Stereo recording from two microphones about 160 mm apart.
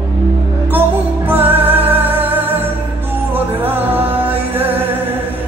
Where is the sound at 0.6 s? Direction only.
10° right (ahead or behind).